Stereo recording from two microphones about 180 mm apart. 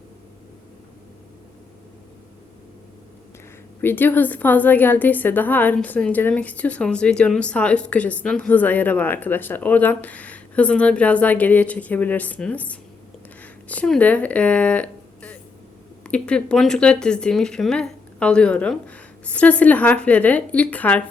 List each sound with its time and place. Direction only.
3.8 s a woman's voice: 10° left (ahead or behind)